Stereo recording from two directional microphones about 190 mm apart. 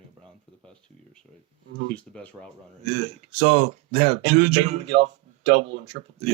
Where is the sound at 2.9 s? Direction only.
35° right (ahead or behind).